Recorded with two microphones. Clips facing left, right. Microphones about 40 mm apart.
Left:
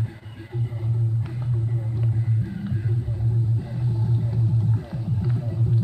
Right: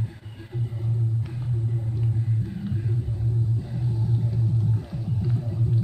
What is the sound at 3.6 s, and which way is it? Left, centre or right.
Music, centre.